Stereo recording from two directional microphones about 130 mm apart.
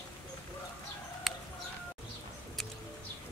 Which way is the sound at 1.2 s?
Centre (ahead or behind).